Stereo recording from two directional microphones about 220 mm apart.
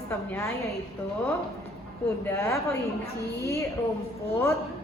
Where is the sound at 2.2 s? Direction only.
10° left (ahead or behind).